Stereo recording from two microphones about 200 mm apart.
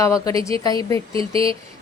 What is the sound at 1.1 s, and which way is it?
Speech, 25° right (ahead or behind).